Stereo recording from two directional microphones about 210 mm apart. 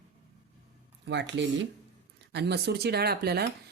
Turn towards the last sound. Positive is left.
turn(degrees=-50)  # may be behind; listen again after turning